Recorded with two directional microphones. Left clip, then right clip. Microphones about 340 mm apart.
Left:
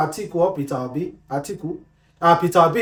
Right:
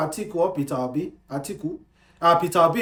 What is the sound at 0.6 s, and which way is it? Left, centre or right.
Speech, centre.